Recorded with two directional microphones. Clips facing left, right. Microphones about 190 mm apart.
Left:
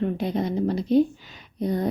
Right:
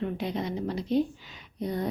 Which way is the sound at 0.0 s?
45° left (ahead or behind).